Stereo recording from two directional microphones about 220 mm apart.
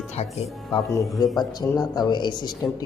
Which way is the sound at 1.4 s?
15° left (ahead or behind).